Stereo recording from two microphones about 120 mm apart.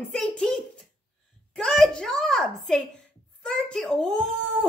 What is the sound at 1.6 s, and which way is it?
A child's voice, 5° left (ahead or behind).